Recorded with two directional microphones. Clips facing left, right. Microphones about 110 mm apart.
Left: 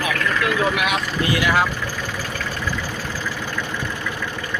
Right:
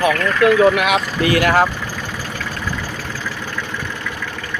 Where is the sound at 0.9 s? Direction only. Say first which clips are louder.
Right 5 dB; 75° right (ahead or behind).